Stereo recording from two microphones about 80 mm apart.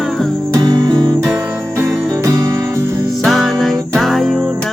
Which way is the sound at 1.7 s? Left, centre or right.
Right.